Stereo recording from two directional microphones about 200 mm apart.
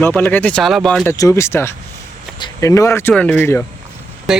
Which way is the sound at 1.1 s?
15° left (ahead or behind).